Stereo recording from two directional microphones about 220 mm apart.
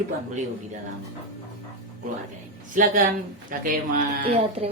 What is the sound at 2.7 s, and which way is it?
Speech, 40° right (ahead or behind).